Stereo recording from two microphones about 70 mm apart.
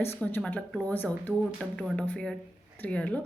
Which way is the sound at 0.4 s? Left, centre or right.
Centre.